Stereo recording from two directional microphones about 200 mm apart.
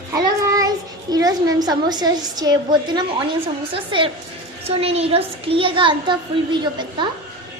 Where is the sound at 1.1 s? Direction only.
20° right (ahead or behind).